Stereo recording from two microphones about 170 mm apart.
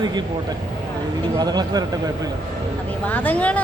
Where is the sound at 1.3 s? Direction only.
25° right (ahead or behind).